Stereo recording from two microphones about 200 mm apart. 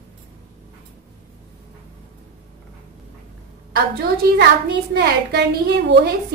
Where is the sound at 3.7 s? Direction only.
55° right (ahead or behind).